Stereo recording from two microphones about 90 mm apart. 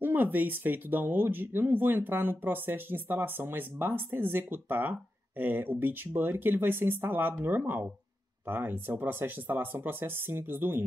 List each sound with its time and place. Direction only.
0.0 s speech: 20° right (ahead or behind)